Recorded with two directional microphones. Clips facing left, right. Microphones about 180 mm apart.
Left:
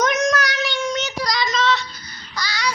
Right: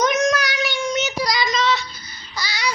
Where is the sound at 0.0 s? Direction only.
Centre (ahead or behind).